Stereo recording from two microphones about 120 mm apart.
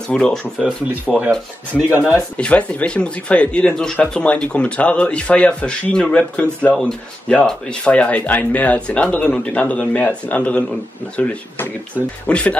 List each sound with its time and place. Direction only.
0.1 s speech: 5° left (ahead or behind)
0.6 s speech: 5° right (ahead or behind)
2.3 s speech: 10° left (ahead or behind)